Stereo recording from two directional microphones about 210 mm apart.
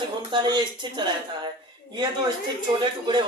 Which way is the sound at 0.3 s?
20° right (ahead or behind).